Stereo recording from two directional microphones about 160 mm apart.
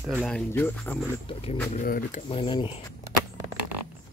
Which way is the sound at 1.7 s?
60° left (ahead or behind).